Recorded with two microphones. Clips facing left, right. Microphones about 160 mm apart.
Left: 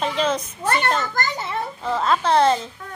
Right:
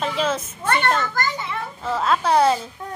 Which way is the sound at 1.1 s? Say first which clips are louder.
Even; 40° left (ahead or behind).